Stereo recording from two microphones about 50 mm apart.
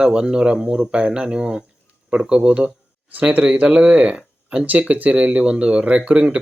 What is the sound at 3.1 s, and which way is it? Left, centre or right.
Speech, right.